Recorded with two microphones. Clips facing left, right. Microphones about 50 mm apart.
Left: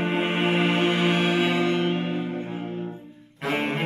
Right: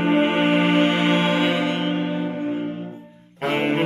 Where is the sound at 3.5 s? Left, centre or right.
Right.